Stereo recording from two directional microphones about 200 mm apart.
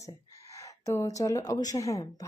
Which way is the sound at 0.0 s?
15° left (ahead or behind).